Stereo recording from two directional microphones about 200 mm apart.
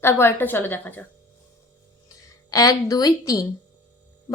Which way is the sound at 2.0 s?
15° left (ahead or behind).